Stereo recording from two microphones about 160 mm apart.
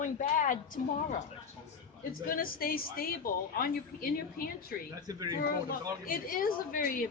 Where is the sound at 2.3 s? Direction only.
65° left (ahead or behind).